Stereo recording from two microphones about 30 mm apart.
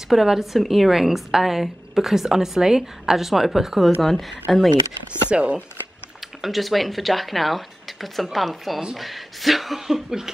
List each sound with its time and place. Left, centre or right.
0.1 s a woman's voice: centre
4.0 s speech: centre
5.3 s speech: right
6.4 s speech: centre